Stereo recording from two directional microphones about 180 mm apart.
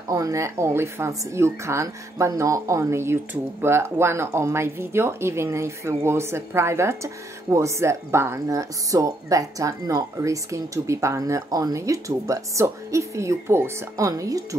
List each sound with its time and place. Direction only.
0.1 s speech: 15° right (ahead or behind)